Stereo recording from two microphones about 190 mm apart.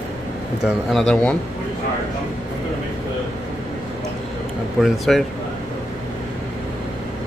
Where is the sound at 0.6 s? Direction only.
Centre (ahead or behind).